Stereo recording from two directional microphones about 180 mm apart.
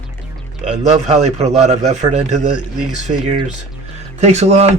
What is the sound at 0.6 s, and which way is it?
Speech, 40° right (ahead or behind).